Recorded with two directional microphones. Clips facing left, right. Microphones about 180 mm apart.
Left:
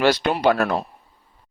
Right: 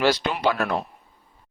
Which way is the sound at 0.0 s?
60° left (ahead or behind).